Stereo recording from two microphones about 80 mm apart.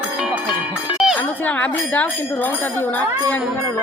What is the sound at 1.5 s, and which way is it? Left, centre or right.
Speech, centre.